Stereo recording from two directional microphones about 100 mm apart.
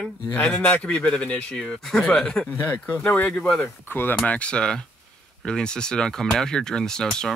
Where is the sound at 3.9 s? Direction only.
20° left (ahead or behind).